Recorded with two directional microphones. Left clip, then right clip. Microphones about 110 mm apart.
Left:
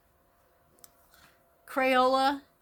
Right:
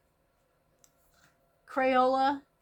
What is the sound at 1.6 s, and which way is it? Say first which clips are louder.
Speech: left 1 dB; 30° left (ahead or behind).